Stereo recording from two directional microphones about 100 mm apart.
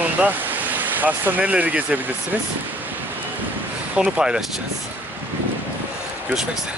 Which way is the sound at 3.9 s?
10° right (ahead or behind).